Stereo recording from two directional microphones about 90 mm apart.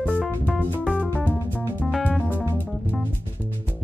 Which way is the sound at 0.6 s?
15° left (ahead or behind).